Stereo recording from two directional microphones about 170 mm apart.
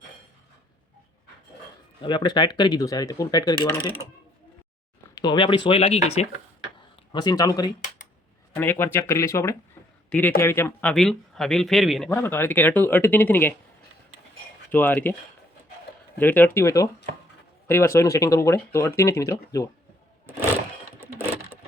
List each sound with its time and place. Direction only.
2.0 s speech: 25° left (ahead or behind)
5.1 s speech: 25° left (ahead or behind)
7.1 s speech: 25° left (ahead or behind); by 12.1 s centre (ahead or behind)
12.1 s speech: 15° left (ahead or behind)
14.7 s speech: 10° left (ahead or behind)
16.1 s speech: 10° left (ahead or behind)